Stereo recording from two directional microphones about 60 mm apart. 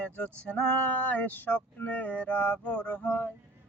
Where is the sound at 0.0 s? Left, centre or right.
Left.